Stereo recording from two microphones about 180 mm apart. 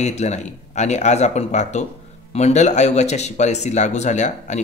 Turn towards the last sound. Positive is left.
turn(degrees=40)  # may be behind; listen again after turning